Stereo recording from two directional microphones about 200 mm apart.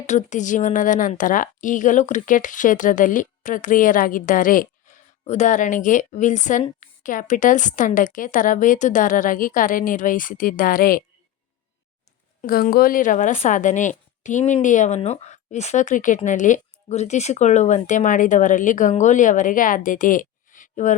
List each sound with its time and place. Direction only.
0.0 s a woman's voice: 35° left (ahead or behind)
12.4 s a woman's voice: 45° left (ahead or behind)